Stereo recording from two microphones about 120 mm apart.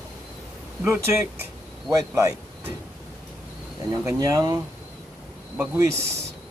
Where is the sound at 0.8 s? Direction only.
20° right (ahead or behind).